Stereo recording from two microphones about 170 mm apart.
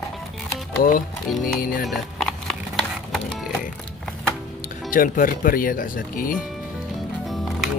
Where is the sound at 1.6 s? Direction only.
55° left (ahead or behind).